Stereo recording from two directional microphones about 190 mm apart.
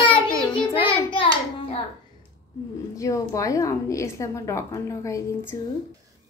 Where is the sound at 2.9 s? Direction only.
15° left (ahead or behind).